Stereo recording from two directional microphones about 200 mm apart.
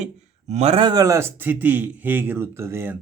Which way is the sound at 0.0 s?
35° right (ahead or behind).